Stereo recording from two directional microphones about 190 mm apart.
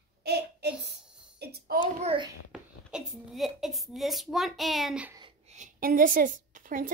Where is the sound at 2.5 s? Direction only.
5° right (ahead or behind).